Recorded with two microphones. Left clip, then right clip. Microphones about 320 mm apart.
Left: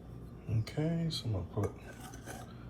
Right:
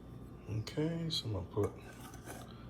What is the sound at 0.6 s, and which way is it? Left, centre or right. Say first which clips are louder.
Speech: even; centre.